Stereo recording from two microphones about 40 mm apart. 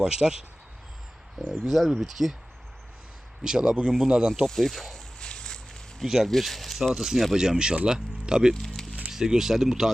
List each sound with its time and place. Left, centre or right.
0.0 s speech: centre
1.4 s speech: centre
1.6 s speech: centre
3.4 s speech: centre
4.4 s speech: centre
5.2 s a sound: left
6.1 s speech: centre
8.6 s music: centre
9.0 s speech: centre